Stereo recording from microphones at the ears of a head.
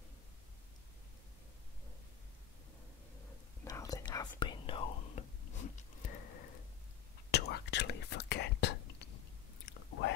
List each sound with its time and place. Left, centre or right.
3.9 s whispering: left